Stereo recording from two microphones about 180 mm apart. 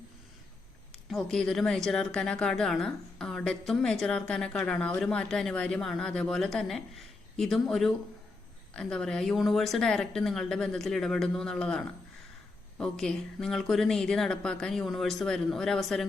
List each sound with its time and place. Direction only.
1.1 s a woman's voice: centre (ahead or behind)